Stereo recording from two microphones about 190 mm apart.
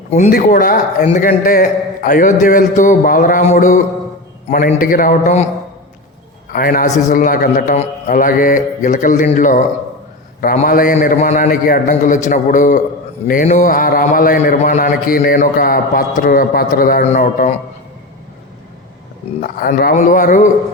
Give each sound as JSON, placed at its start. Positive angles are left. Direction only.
{"t": 0.2, "sound": "a man's voice", "side_deg": 50}
{"t": 6.5, "sound": "a man's voice", "side_deg": 50}
{"t": 19.4, "sound": "a man's voice", "side_deg": 50}